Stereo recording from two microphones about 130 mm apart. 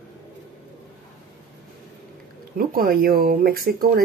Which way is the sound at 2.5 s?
90° right.